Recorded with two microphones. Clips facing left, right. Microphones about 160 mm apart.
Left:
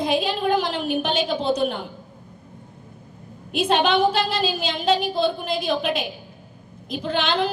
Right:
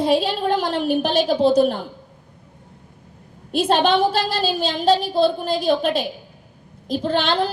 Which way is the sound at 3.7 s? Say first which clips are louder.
Right 2 dB; 35° right (ahead or behind).